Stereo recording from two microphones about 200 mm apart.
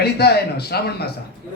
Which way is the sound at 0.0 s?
55° left (ahead or behind).